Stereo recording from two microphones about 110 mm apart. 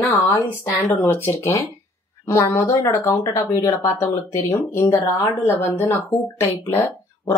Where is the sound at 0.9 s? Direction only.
20° left (ahead or behind).